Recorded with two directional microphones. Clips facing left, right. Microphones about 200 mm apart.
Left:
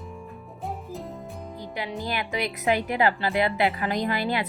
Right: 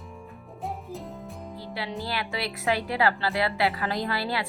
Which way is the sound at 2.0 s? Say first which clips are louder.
Left 4 dB; 15° left (ahead or behind).